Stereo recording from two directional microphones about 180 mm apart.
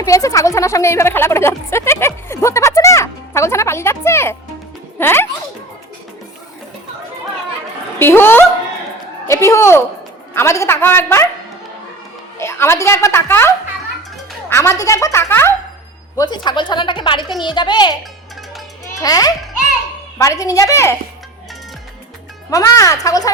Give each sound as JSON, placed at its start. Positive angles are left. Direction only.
{"t": 0.0, "sound": "speech", "side_deg": 15}
{"t": 4.9, "sound": "music", "side_deg": 10}
{"t": 7.9, "sound": "speech", "side_deg": 10}
{"t": 12.4, "sound": "a woman's voice", "side_deg": 15}
{"t": 14.5, "sound": "a woman's voice", "side_deg": 15}
{"t": 18.9, "sound": "a woman's voice", "side_deg": 20}
{"t": 22.4, "sound": "a woman's voice", "side_deg": 20}